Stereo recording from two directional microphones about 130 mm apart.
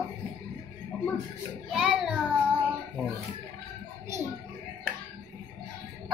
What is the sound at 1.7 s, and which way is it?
Child singing, 5° right (ahead or behind).